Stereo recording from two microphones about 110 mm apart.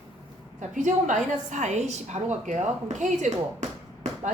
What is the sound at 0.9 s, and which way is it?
A woman's voice, 90° right.